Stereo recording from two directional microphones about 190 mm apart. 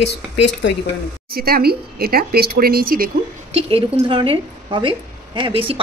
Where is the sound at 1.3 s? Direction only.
55° right (ahead or behind).